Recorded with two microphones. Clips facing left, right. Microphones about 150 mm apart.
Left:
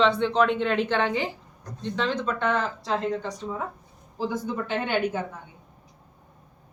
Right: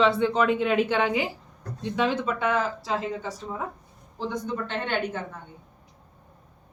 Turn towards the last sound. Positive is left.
turn(degrees=10)  # may be behind; listen again after turning